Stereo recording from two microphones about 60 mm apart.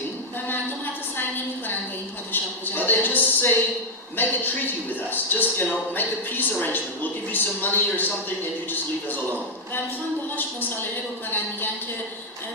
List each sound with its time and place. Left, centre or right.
2.3 s a man's voice: left
10.3 s a man's voice: left